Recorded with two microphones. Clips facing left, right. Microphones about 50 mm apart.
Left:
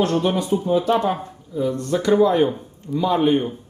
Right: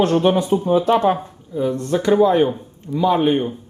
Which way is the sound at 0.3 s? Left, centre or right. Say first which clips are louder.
Right 4 dB; right.